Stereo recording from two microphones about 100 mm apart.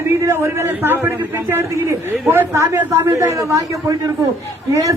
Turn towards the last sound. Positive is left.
turn(degrees=-30)  # may be behind; listen again after turning